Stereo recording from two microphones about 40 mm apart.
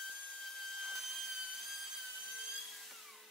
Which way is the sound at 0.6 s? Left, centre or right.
Centre.